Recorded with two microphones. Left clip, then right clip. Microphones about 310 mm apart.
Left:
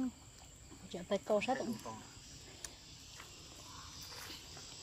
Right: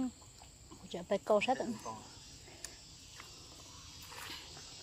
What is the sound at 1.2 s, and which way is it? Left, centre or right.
Speech, right.